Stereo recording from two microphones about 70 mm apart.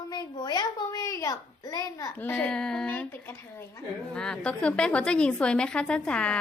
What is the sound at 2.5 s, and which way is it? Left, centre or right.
Speech, centre.